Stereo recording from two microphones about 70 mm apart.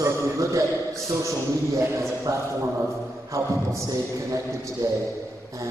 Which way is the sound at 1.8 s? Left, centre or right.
Right.